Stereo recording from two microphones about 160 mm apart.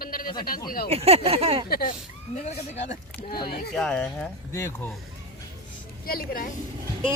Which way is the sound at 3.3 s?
70° left (ahead or behind).